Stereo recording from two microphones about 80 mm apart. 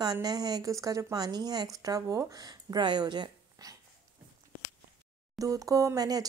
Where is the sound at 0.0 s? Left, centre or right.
Right.